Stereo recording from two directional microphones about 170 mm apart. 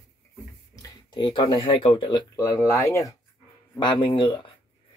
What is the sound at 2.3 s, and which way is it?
Speech, 20° left (ahead or behind).